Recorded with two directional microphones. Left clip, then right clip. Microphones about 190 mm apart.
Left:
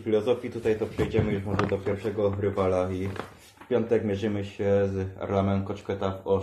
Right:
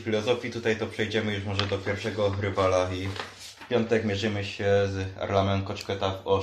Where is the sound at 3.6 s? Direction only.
35° left (ahead or behind).